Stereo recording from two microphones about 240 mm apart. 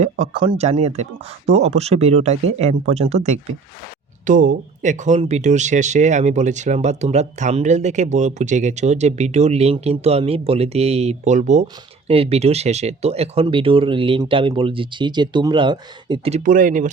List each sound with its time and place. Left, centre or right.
0.0 s speech: right
4.3 s speech: right